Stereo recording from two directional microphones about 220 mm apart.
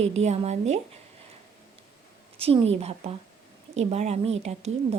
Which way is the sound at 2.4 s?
25° right (ahead or behind).